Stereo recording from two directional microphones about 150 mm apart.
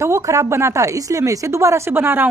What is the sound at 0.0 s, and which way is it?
Speech, 20° right (ahead or behind).